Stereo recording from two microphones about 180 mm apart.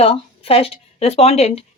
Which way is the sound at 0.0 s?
30° left (ahead or behind).